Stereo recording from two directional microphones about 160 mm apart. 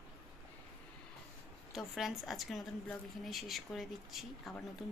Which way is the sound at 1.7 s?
Centre (ahead or behind).